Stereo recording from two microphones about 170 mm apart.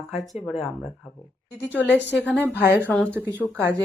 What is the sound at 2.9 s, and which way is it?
Speech, 5° left (ahead or behind).